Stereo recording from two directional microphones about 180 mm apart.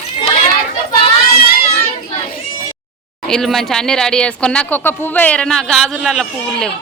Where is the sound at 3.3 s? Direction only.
Centre (ahead or behind).